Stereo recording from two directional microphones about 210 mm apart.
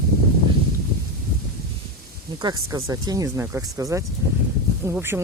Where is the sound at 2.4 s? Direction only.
20° right (ahead or behind).